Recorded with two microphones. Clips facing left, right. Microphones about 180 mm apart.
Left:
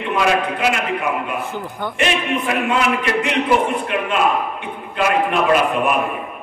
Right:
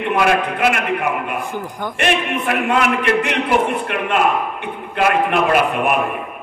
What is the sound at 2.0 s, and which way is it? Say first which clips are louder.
A man's voice: right 1 dB; 55° right (ahead or behind).